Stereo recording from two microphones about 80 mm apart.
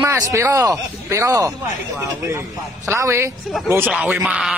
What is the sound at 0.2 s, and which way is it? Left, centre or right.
Speech, right.